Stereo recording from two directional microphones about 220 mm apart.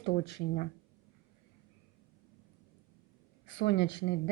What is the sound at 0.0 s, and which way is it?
Speech, 50° left (ahead or behind).